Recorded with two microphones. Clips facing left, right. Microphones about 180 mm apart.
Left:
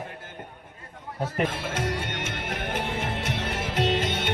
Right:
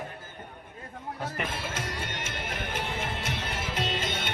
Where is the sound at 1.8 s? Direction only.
60° left (ahead or behind).